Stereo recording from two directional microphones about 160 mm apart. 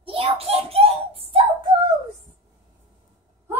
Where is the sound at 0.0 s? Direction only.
35° right (ahead or behind).